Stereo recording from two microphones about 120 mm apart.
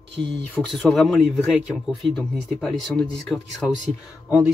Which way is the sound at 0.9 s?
Centre (ahead or behind).